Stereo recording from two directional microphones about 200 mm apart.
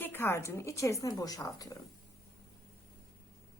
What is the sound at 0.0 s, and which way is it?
A woman's voice, 10° left (ahead or behind).